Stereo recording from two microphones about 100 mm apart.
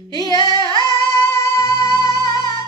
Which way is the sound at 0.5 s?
45° right (ahead or behind).